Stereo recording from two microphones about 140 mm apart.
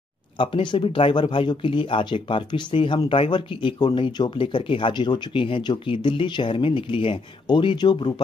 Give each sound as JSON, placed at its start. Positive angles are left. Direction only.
{"t": 0.4, "sound": "speech", "side_deg": 35}